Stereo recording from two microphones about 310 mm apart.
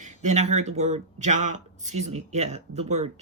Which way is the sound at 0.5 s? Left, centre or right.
Right.